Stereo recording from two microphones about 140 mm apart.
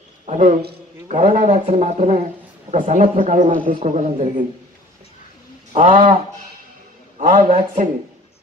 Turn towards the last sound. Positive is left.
turn(degrees=-65)  # may be behind; listen again after turning